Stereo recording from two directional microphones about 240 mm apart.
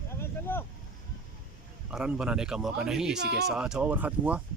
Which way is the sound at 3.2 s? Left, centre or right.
Right.